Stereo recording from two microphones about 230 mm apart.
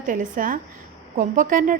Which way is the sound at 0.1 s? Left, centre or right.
Right.